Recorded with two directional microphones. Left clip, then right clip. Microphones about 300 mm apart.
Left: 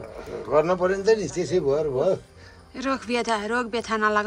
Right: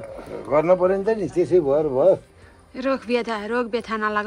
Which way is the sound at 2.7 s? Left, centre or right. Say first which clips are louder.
Right 3 dB; centre.